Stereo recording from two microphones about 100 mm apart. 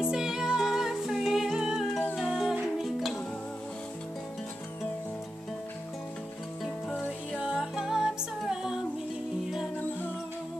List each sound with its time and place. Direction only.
0.1 s music: 5° right (ahead or behind)
6.9 s music: 15° left (ahead or behind)
7.3 s music: 10° right (ahead or behind)
9.8 s music: 20° left (ahead or behind)